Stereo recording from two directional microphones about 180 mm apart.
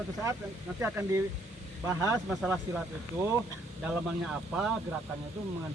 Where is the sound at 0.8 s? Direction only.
10° right (ahead or behind).